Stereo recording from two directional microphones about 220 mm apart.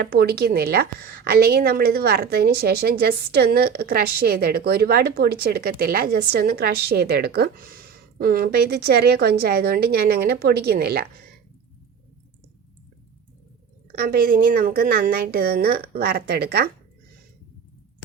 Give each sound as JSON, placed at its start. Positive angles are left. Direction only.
{"t": 0.0, "sound": "a woman's voice", "side_deg": -45}
{"t": 13.9, "sound": "a woman's voice", "side_deg": -45}